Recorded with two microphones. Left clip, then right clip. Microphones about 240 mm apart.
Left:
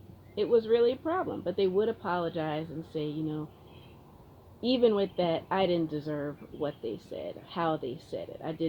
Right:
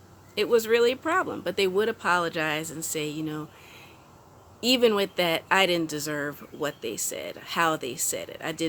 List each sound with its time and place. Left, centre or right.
0.3 s speech: right
4.6 s speech: right